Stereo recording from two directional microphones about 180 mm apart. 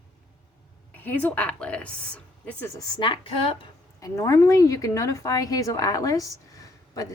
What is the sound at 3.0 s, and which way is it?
Speech, 30° left (ahead or behind).